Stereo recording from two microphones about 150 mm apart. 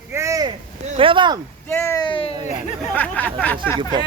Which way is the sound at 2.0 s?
35° left (ahead or behind).